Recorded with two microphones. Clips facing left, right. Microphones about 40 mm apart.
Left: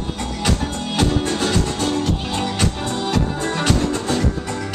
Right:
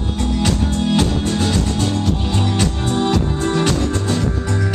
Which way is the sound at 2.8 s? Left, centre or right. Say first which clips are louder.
Right 5 dB; right.